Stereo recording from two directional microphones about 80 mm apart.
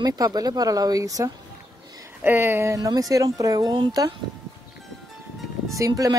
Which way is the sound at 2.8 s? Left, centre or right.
Right.